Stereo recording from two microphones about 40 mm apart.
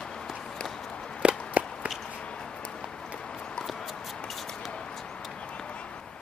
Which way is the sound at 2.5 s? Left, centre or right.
Left.